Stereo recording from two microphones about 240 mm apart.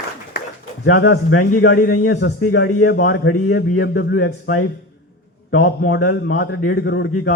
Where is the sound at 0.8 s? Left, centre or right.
Left.